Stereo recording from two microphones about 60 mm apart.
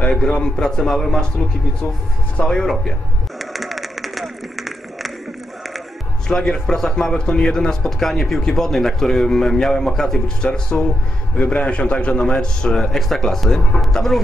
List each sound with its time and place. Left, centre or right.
0.1 s a man's voice: centre
2.3 s speech: centre
2.6 s a man's voice: centre
3.3 s a sound: centre
6.2 s a man's voice: centre